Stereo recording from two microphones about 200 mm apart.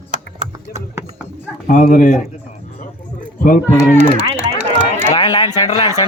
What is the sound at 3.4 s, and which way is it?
Speech, 45° left (ahead or behind).